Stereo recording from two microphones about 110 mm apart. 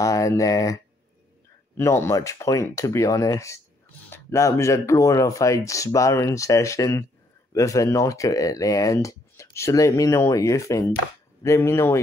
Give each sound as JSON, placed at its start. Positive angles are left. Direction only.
{"t": 0.0, "sound": "speech", "side_deg": 30}
{"t": 1.8, "sound": "speech", "side_deg": 25}